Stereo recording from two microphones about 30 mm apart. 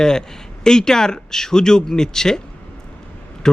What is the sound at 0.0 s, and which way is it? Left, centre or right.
Speech, left.